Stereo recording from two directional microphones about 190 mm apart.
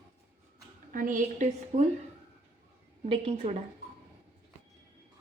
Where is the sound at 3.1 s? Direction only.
30° right (ahead or behind).